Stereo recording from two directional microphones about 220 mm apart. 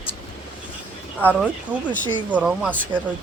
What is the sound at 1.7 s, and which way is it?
Speech, 10° right (ahead or behind).